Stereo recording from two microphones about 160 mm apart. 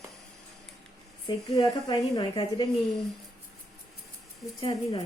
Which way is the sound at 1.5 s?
20° left (ahead or behind).